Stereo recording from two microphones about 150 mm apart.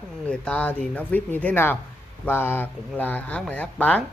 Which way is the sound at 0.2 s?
10° left (ahead or behind).